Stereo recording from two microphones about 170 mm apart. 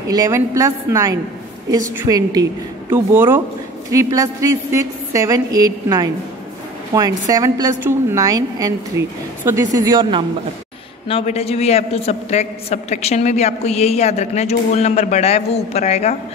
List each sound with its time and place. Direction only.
0.1 s a woman's voice: 20° right (ahead or behind)
11.1 s a man's voice: 35° left (ahead or behind)